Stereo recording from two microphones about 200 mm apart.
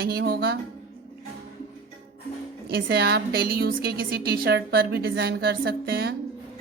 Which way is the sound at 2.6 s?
50° right (ahead or behind).